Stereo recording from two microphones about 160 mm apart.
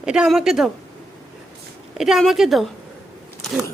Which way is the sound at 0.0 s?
5° right (ahead or behind).